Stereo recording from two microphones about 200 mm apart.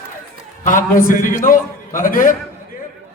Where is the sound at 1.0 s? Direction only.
40° left (ahead or behind).